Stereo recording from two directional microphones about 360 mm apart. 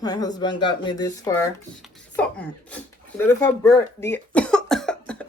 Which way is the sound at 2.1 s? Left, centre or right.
Centre.